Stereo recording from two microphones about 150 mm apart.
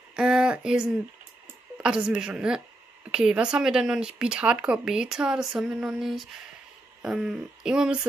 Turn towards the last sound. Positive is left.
turn(degrees=-5)  # may be behind; listen again after turning